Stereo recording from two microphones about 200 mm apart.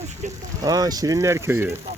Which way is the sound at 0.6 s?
20° right (ahead or behind).